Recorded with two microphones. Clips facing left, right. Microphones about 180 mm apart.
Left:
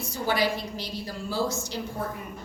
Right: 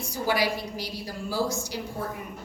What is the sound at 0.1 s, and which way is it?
A woman's voice, 10° right (ahead or behind).